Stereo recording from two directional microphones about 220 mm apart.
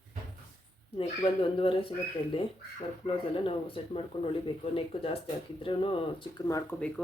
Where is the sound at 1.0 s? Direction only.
25° left (ahead or behind).